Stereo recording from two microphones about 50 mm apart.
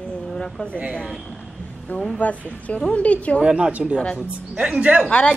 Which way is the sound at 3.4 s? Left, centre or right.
Centre.